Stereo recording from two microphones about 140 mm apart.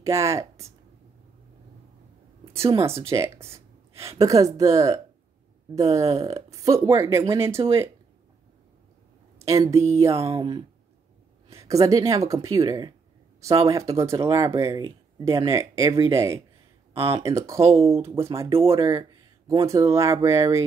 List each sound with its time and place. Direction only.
0.0 s speech: 20° right (ahead or behind)
2.5 s speech: 20° right (ahead or behind)
9.5 s speech: 20° right (ahead or behind)
10.1 s speech: 45° right (ahead or behind)
11.5 s speech: 20° right (ahead or behind)
16.9 s speech: 45° right (ahead or behind)
17.2 s speech: 20° right (ahead or behind)
17.6 s speech: 45° right (ahead or behind)
17.8 s speech: 20° right (ahead or behind)
18.9 s a sound: 25° right (ahead or behind)
19.6 s speech: 20° right (ahead or behind)